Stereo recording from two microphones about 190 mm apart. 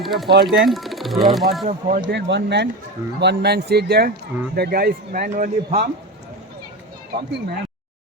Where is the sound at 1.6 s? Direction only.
45° right (ahead or behind).